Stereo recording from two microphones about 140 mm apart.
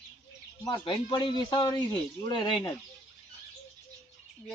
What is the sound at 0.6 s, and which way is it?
A man's voice, 35° left (ahead or behind).